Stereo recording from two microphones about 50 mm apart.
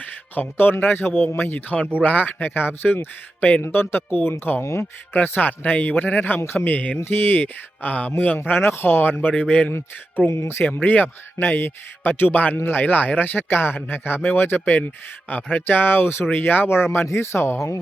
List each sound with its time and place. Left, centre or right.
0.0 s speech: left
1.5 s a man's voice: left
4.6 s speech: left
5.1 s a man's voice: left
7.0 s a man's voice: left
8.4 s speech: left
9.4 s a man's voice: left
14.6 s a man's voice: left
15.6 s speech: left